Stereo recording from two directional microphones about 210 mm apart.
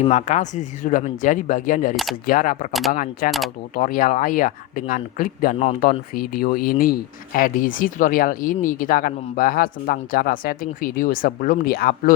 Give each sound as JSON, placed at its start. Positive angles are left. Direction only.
{"t": 0.0, "sound": "speech", "side_deg": 30}